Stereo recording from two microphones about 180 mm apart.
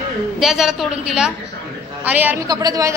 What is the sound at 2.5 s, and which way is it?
Speech, 20° right (ahead or behind).